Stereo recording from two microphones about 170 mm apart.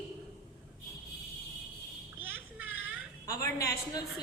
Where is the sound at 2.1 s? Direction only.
10° right (ahead or behind).